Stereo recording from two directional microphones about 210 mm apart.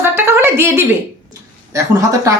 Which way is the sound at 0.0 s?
10° right (ahead or behind).